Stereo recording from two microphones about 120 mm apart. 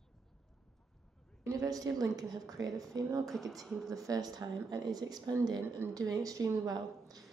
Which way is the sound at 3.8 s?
30° right (ahead or behind).